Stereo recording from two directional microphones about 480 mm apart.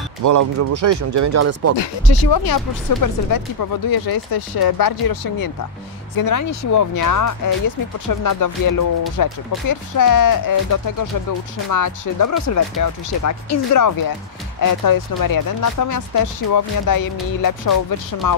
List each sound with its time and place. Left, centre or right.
0.2 s speech: right
1.8 s speech: left